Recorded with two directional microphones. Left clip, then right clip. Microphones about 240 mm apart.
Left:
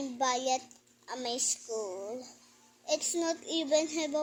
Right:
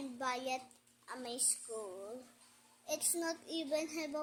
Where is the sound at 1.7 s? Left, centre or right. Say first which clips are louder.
Left 8 dB; right.